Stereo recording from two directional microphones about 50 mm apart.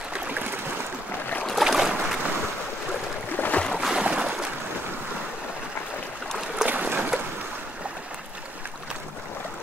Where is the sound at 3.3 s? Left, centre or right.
Left.